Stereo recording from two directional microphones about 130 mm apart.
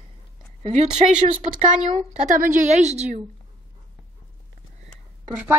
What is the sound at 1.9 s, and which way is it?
A woman's voice, 75° right (ahead or behind).